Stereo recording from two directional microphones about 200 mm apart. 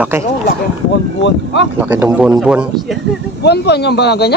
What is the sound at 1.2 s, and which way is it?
Speech, 65° left (ahead or behind).